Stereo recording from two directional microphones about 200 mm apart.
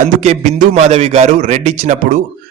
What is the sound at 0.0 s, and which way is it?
A man's voice, 35° right (ahead or behind).